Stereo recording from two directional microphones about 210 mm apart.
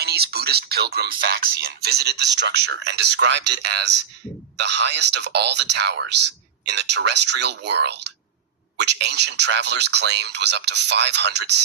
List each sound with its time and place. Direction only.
0.0 s speech: 50° right (ahead or behind)